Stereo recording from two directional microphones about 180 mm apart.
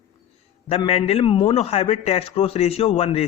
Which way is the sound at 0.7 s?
35° left (ahead or behind).